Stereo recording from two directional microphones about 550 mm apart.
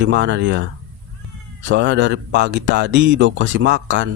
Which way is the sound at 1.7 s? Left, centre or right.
Centre.